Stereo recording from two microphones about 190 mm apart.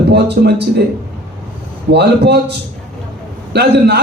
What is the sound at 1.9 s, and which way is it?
A man's voice, 60° right (ahead or behind).